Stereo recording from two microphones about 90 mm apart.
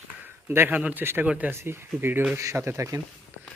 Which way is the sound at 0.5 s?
25° right (ahead or behind).